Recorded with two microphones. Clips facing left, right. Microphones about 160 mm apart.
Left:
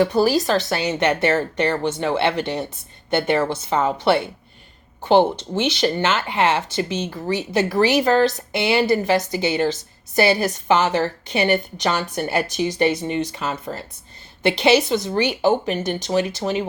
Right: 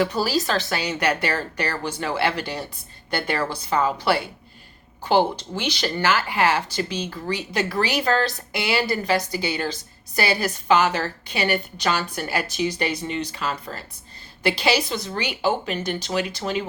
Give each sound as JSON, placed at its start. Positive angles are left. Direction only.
{"t": 0.0, "sound": "speech", "side_deg": 20}